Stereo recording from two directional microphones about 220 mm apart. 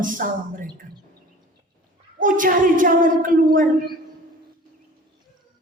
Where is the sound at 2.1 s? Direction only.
40° right (ahead or behind).